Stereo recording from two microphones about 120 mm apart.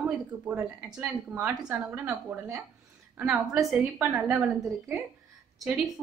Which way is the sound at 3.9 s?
15° right (ahead or behind).